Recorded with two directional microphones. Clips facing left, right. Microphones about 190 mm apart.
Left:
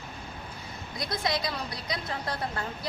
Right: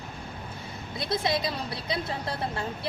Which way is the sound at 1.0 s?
25° right (ahead or behind).